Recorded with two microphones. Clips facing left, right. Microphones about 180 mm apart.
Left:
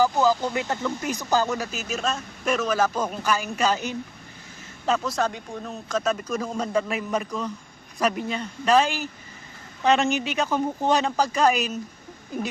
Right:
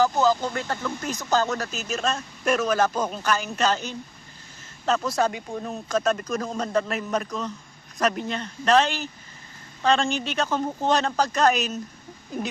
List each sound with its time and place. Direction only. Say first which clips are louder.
0.0 s speech: even; 10° left (ahead or behind)
4.9 s speech: right 2 dB; 5° right (ahead or behind)